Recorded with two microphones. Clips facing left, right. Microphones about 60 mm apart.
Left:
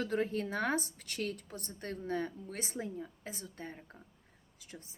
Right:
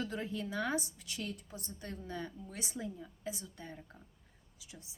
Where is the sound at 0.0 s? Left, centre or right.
Left.